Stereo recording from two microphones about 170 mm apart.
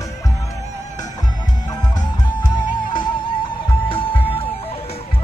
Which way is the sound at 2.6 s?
25° left (ahead or behind).